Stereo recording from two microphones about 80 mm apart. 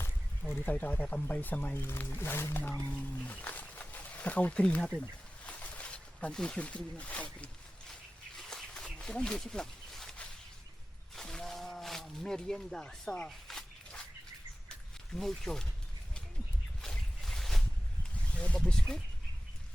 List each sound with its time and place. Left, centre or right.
0.5 s speech: centre
5.5 s snake: centre
8.4 s a sound: centre
11.1 s wild animals: centre
13.2 s dog: centre
15.1 s speech: centre
16.8 s boat: centre
18.1 s speech: centre